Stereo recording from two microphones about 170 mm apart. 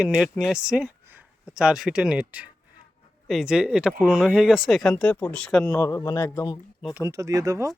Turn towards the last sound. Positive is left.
turn(degrees=-20)  # may be behind; listen again after turning